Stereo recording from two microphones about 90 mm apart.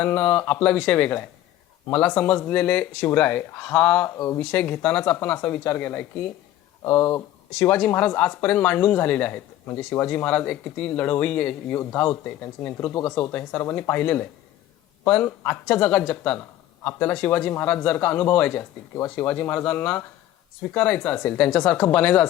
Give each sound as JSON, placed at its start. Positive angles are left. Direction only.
{"t": 0.0, "sound": "speech", "side_deg": 15}
{"t": 4.2, "sound": "speech", "side_deg": 30}
{"t": 4.5, "sound": "speech", "side_deg": 15}
{"t": 17.5, "sound": "speech", "side_deg": 25}